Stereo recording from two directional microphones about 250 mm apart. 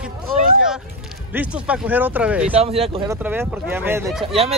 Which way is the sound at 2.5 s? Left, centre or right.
Right.